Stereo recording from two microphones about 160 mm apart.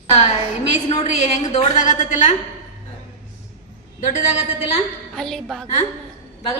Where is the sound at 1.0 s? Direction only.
45° left (ahead or behind).